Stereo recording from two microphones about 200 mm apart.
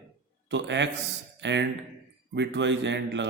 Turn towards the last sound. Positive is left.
turn(degrees=-60)  # may be behind; listen again after turning